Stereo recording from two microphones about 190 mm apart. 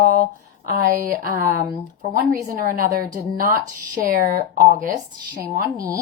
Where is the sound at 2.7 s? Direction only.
45° right (ahead or behind).